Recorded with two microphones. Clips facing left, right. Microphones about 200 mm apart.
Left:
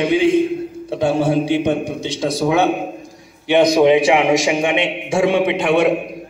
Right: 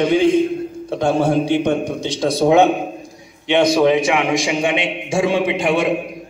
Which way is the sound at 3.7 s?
20° left (ahead or behind).